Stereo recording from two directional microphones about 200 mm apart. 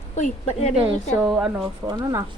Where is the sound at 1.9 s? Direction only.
20° right (ahead or behind).